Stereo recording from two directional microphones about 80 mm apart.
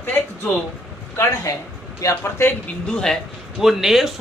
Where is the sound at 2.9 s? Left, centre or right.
Centre.